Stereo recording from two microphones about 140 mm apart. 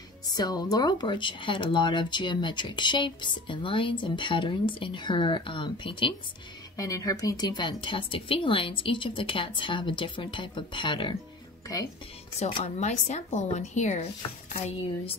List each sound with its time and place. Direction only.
0.3 s speech: 30° left (ahead or behind)
6.8 s speech: 25° left (ahead or behind)
12.4 s speech: 40° left (ahead or behind)